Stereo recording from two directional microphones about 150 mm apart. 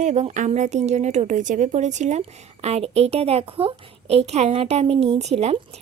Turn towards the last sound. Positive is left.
turn(degrees=-45)  # may be behind; listen again after turning